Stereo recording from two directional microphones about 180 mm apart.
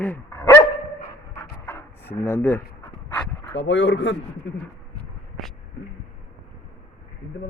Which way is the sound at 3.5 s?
90° left.